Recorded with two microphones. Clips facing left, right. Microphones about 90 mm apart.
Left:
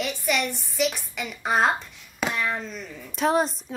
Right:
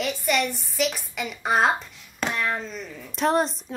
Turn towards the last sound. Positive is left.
turn(degrees=0)  # may be behind; listen again after turning